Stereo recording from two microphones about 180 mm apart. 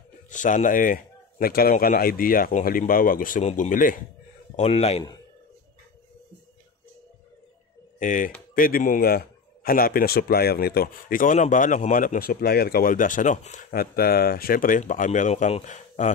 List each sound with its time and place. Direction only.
0.3 s a man's voice: 45° left (ahead or behind)
4.6 s speech: 35° left (ahead or behind)
8.0 s a man's voice: 45° left (ahead or behind)
13.7 s a man's voice: 55° left (ahead or behind); by 16.1 s 40° left (ahead or behind)